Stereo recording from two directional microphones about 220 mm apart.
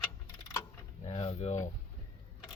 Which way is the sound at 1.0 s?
25° left (ahead or behind).